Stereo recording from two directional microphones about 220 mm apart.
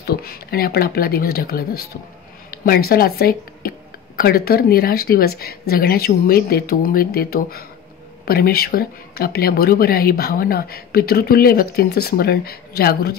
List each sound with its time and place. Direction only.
0.0 s speech: 45° left (ahead or behind)